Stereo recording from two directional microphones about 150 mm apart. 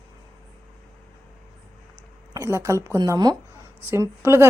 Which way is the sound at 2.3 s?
20° right (ahead or behind).